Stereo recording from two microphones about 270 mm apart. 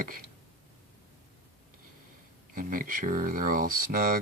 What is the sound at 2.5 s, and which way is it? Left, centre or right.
Speech, right.